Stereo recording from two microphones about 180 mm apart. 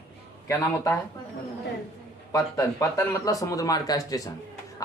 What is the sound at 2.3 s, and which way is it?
Speech, 20° left (ahead or behind).